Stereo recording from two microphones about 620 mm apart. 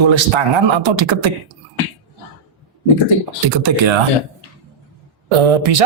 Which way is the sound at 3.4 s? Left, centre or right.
Right.